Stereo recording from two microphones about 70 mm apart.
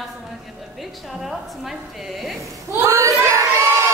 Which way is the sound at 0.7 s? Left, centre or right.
Centre.